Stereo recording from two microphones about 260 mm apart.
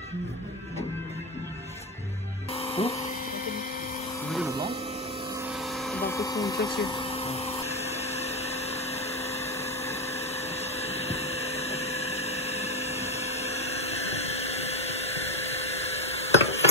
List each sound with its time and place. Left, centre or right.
2.5 s music: left
5.9 s vacuum cleaner: centre; by 9.5 s left
10.1 s a sound: left